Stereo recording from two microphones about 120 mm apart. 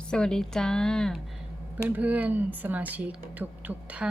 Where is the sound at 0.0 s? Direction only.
5° left (ahead or behind).